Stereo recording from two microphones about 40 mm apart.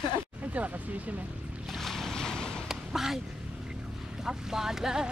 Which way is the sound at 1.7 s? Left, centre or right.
Centre.